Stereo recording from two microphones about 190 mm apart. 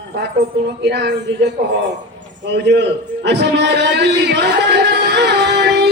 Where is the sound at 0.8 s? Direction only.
65° right (ahead or behind).